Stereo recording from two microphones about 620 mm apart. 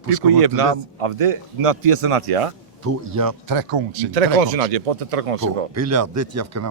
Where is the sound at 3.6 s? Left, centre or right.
Right.